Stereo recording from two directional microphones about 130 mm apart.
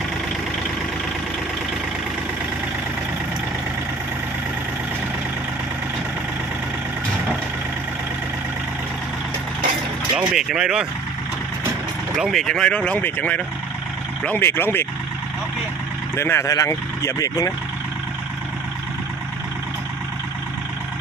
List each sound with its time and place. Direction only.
10.2 s speech: 5° right (ahead or behind)
12.1 s speech: centre (ahead or behind); by 14.8 s 15° left (ahead or behind)
16.1 s speech: 20° left (ahead or behind)